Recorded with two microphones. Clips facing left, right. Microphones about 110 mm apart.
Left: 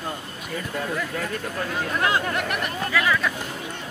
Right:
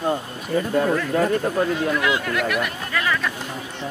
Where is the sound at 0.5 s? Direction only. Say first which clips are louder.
Right 9 dB; 35° right (ahead or behind).